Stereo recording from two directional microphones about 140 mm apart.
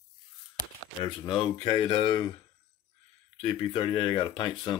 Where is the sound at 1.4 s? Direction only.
35° left (ahead or behind).